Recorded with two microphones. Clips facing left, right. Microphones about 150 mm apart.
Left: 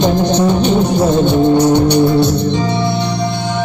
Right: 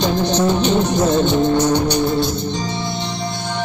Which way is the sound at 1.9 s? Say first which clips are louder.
Left 7 dB; 60° left (ahead or behind).